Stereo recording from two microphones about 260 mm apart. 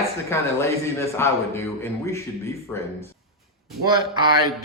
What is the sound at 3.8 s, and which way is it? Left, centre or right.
Speech, centre.